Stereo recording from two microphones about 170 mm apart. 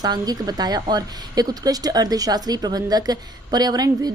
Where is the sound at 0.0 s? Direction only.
25° right (ahead or behind).